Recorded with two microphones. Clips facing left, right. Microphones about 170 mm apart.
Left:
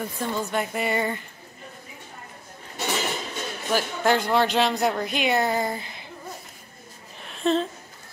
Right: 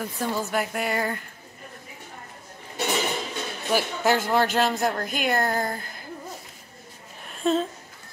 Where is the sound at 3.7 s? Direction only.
5° right (ahead or behind).